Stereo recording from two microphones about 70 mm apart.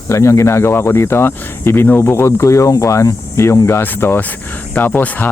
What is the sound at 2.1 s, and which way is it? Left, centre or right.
Speech, left.